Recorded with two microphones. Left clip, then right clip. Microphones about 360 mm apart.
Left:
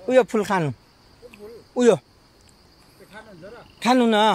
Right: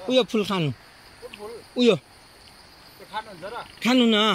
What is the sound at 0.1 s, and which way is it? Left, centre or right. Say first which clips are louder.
Speech: left 4 dB; centre.